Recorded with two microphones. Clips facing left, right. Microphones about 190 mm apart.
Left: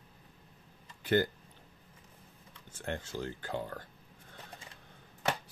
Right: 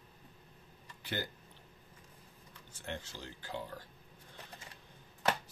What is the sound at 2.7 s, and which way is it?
Speech, 50° left (ahead or behind).